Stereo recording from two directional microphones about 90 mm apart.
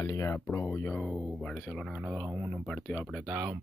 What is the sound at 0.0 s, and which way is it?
Speech, 35° left (ahead or behind).